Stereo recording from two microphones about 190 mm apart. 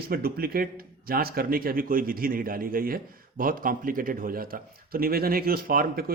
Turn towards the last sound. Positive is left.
turn(degrees=-50)  # may be behind; listen again after turning